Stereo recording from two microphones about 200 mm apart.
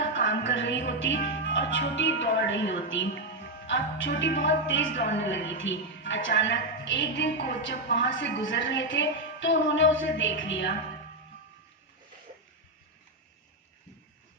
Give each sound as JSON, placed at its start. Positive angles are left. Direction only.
{"t": 0.1, "sound": "music", "side_deg": 65}
{"t": 1.3, "sound": "speech", "side_deg": 65}